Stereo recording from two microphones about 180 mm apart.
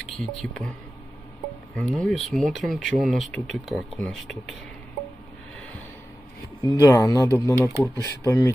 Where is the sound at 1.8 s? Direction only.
5° left (ahead or behind).